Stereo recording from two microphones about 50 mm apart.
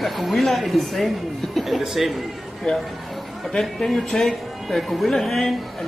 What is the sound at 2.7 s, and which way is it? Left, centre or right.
Speech, centre.